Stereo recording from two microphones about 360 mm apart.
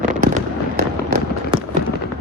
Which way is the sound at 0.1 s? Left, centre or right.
Right.